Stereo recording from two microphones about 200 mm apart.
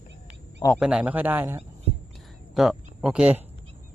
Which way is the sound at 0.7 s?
5° right (ahead or behind).